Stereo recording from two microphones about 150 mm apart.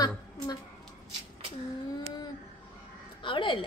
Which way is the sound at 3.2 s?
35° left (ahead or behind).